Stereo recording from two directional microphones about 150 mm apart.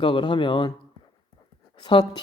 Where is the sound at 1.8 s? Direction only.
30° left (ahead or behind).